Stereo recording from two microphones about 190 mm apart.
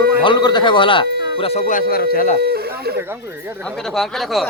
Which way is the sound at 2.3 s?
55° right (ahead or behind).